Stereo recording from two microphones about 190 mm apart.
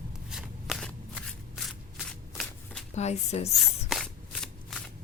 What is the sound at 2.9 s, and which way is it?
Speech, 35° left (ahead or behind).